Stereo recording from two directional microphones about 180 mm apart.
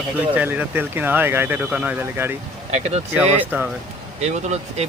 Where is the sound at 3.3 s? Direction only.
10° right (ahead or behind).